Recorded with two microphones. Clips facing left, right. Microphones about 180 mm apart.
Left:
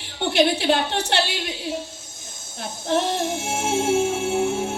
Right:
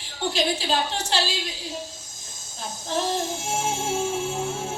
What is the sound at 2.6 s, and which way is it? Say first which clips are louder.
Music: left 5 dB; 65° left (ahead or behind).